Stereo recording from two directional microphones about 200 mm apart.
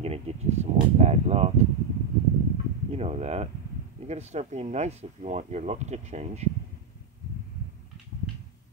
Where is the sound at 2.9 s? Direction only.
30° right (ahead or behind).